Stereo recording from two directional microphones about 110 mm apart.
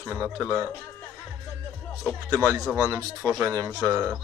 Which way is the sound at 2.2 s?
30° right (ahead or behind).